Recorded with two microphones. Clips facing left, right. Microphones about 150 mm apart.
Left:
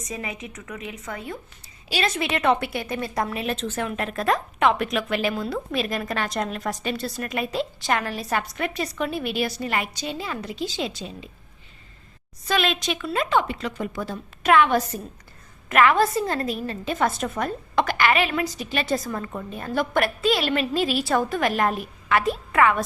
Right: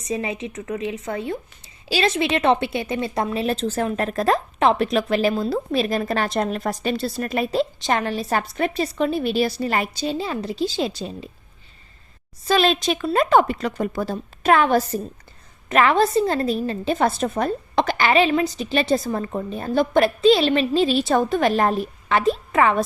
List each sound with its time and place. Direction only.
0.0 s a woman's voice: 30° right (ahead or behind)
12.5 s a woman's voice: 35° right (ahead or behind)